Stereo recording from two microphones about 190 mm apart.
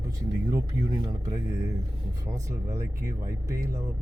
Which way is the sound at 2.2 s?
15° right (ahead or behind).